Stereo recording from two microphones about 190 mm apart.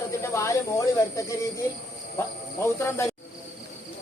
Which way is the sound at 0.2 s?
15° left (ahead or behind).